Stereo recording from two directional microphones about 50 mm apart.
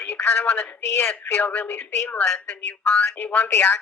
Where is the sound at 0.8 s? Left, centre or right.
Left.